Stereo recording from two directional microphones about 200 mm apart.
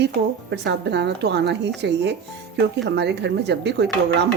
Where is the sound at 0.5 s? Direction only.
60° right (ahead or behind).